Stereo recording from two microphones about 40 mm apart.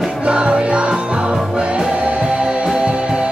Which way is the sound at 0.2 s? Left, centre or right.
Right.